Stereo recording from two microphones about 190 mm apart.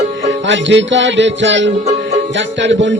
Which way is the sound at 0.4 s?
70° right (ahead or behind).